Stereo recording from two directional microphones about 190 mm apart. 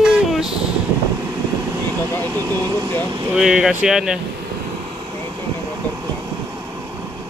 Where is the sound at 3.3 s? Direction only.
5° right (ahead or behind).